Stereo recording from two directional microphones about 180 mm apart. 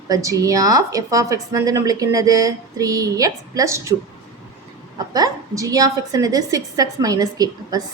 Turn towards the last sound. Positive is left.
turn(degrees=-20)  # may be behind; listen again after turning